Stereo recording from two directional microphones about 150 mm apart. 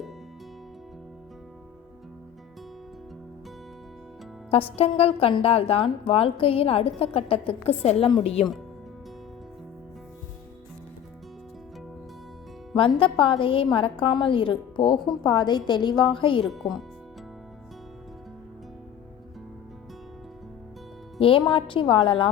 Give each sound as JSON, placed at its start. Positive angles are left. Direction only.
{"t": 4.5, "sound": "a woman's voice", "side_deg": 40}
{"t": 13.0, "sound": "a woman's voice", "side_deg": 35}
{"t": 21.2, "sound": "a woman's voice", "side_deg": 35}